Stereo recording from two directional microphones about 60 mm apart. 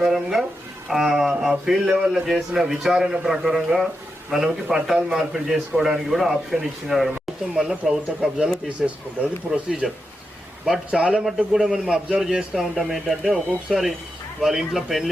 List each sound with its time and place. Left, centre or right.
0.0 s a sound: centre
0.9 s a man's voice: centre
7.5 s a man's voice: centre
9.5 s a man's voice: centre